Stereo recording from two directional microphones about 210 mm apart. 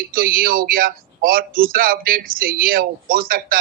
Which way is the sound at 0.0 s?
45° right (ahead or behind).